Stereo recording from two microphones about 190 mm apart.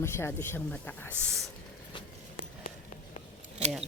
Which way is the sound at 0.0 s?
10° left (ahead or behind).